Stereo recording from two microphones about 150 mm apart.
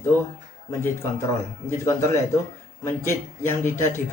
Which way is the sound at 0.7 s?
20° left (ahead or behind).